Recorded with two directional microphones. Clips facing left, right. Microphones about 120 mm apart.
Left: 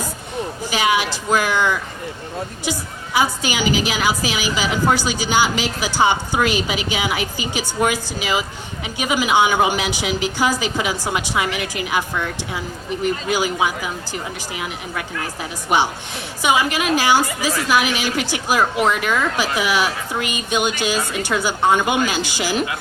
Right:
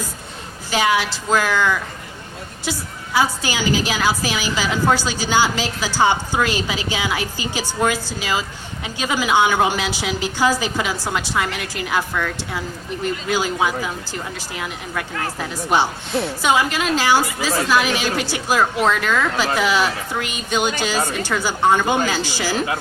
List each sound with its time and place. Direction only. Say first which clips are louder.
0.8 s a woman's voice: right 1 dB; 15° left (ahead or behind)
15.7 s a woman's voice: even; 15° left (ahead or behind)